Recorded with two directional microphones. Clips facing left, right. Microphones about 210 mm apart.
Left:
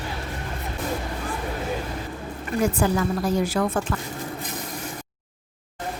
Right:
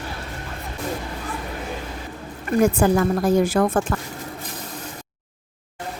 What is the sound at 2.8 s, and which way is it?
A woman's voice, 50° right (ahead or behind).